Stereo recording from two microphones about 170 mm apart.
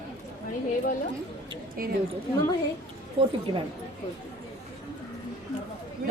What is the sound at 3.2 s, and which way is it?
Speech, 30° right (ahead or behind).